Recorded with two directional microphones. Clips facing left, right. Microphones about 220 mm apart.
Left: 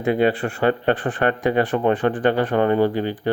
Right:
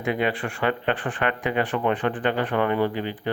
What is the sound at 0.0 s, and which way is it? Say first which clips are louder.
Speech: left 6 dB; 35° left (ahead or behind).